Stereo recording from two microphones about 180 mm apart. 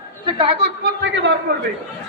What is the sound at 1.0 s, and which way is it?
Speech, 80° right.